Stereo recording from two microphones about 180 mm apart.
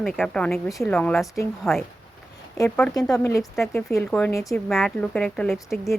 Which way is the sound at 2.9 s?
20° left (ahead or behind).